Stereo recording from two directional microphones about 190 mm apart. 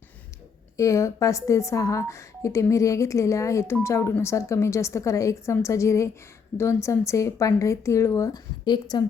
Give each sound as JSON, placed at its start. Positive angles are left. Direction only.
{"t": 0.8, "sound": "a woman's voice", "side_deg": 15}